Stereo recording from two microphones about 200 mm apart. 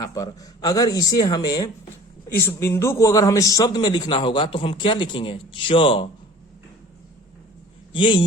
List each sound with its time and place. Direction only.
0.0 s a man's voice: 15° left (ahead or behind)
7.9 s a man's voice: 25° left (ahead or behind)